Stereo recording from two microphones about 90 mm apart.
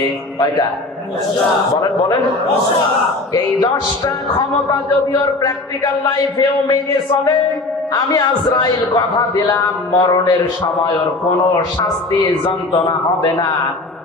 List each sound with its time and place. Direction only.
3.3 s a man's voice: 45° left (ahead or behind)
7.9 s a man's voice: 50° left (ahead or behind)